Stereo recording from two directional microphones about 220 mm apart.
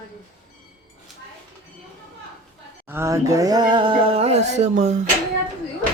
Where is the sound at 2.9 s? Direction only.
10° right (ahead or behind); by 5.0 s 30° right (ahead or behind).